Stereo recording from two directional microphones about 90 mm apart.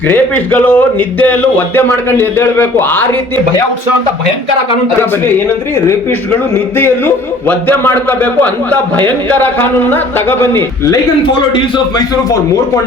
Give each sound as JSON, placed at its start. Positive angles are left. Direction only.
{"t": 0.1, "sound": "a man's voice", "side_deg": 20}
{"t": 6.7, "sound": "a man's voice", "side_deg": 25}